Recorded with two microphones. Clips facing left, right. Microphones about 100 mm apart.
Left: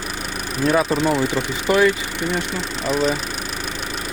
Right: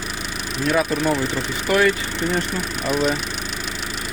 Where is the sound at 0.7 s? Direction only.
30° left (ahead or behind).